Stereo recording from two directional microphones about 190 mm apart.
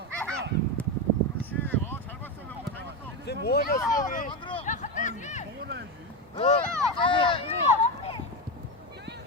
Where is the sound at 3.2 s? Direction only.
60° left (ahead or behind).